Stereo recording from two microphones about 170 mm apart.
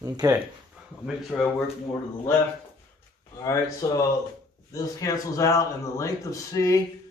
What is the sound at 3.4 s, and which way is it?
Speech, 20° left (ahead or behind).